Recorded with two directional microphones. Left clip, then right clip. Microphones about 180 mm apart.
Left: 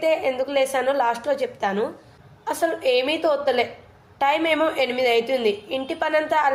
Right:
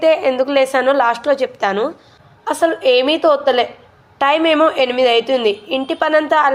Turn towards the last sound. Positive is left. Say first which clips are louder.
# right 7 dB
turn(degrees=-25)  # may be behind; listen again after turning